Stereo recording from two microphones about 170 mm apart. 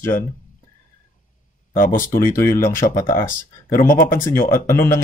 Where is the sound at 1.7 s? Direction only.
55° left (ahead or behind).